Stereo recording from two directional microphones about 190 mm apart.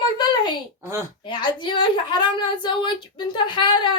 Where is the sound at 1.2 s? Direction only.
25° left (ahead or behind).